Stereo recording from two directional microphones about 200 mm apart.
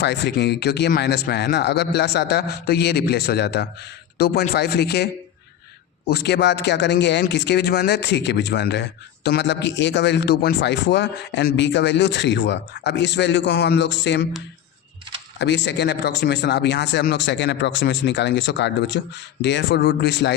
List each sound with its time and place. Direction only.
0.0 s speech: 55° left (ahead or behind)
6.1 s speech: 55° left (ahead or behind)
15.4 s speech: 60° left (ahead or behind)